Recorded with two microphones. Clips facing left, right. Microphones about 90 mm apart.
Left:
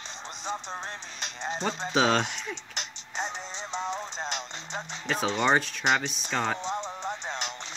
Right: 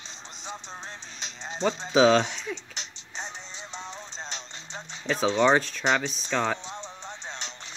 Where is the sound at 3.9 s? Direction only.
70° left (ahead or behind).